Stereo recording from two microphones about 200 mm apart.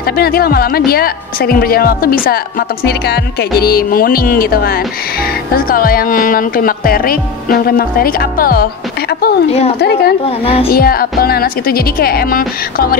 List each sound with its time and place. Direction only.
0.2 s a woman's voice: 50° left (ahead or behind)
9.8 s speech: 55° left (ahead or behind)
10.2 s a child's voice: 30° left (ahead or behind)
10.7 s a woman's voice: 50° left (ahead or behind)